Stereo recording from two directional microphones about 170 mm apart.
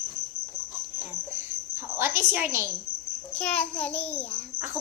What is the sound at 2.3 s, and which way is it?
Speech, 15° right (ahead or behind).